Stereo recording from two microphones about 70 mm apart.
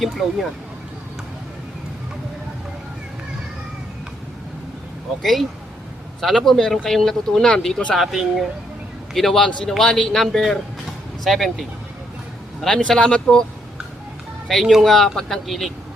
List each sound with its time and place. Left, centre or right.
0.0 s speech: centre
5.2 s speech: centre
7.9 s speech: centre
12.6 s speech: centre
14.4 s speech: centre